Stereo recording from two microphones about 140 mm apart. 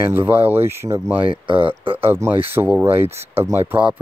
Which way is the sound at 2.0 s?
15° right (ahead or behind).